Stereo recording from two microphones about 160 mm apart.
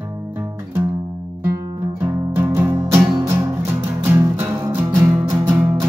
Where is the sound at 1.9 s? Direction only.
15° right (ahead or behind).